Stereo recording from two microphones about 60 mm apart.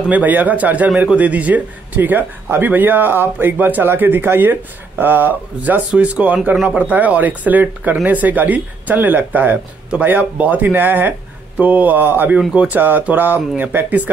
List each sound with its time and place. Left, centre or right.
0.1 s speech: right
12.4 s speech: right